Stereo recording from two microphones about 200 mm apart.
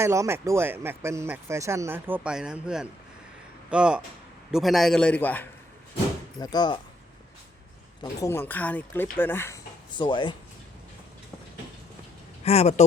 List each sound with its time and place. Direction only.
0.0 s a man's voice: 15° right (ahead or behind); by 5.5 s 10° left (ahead or behind)
6.4 s speech: 20° left (ahead or behind)
8.2 s speech: 10° left (ahead or behind)
10.0 s speech: 25° left (ahead or behind)
12.5 s speech: 35° left (ahead or behind)